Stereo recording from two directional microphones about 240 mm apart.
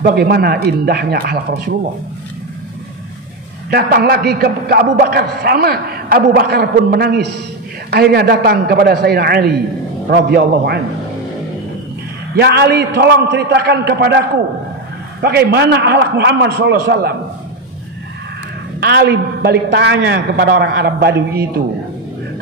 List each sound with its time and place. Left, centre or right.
0.0 s a man's voice: right
3.7 s a man's voice: right
12.4 s a man's voice: right
18.8 s a man's voice: right